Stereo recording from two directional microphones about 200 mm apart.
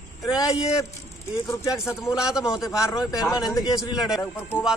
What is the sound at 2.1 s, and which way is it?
Speech, 5° right (ahead or behind).